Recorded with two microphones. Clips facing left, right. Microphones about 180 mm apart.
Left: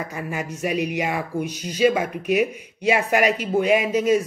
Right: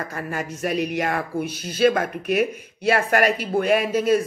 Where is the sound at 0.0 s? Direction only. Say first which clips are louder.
Even; 10° left (ahead or behind).